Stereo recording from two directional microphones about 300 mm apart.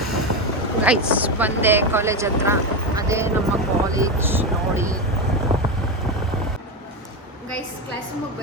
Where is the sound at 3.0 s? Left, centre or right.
Centre.